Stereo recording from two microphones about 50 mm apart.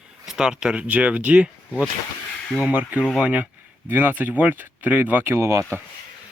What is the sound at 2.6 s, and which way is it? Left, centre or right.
Speech, right.